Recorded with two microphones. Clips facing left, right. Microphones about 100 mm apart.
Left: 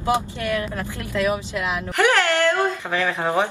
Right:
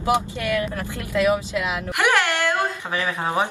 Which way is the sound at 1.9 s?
15° right (ahead or behind).